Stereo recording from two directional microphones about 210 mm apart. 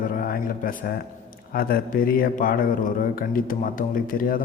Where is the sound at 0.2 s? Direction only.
40° left (ahead or behind).